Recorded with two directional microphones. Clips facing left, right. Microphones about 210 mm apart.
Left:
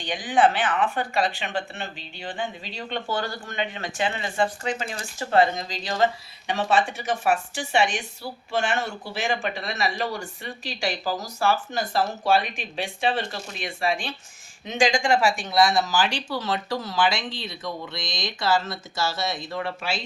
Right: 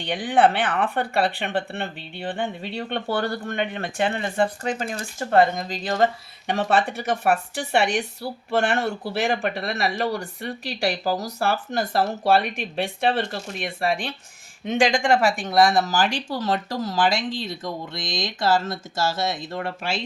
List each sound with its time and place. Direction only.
0.0 s speech: 60° right (ahead or behind)